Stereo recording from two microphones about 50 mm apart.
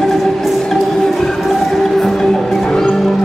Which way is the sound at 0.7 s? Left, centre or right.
Centre.